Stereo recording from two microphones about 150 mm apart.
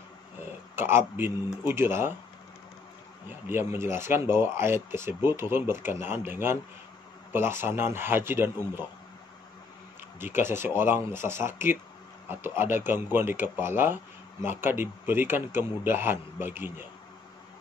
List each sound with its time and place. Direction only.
0.7 s speech: 15° right (ahead or behind)
3.3 s speech: 15° right (ahead or behind)
10.1 s speech: 15° right (ahead or behind)